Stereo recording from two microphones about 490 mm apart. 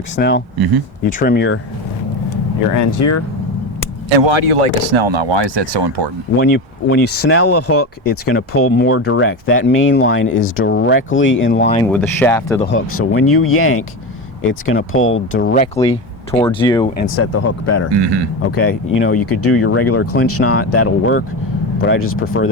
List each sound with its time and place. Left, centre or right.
0.2 s speech: centre
2.7 s speech: left
4.1 s speech: right
6.4 s speech: left
11.7 s speech: centre
12.7 s speech: left; by 16.9 s centre
17.0 s speech: left
17.9 s speech: right
18.4 s speech: left